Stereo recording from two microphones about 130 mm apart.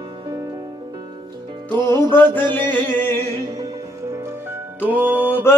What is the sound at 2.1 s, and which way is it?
Mantra, 15° left (ahead or behind).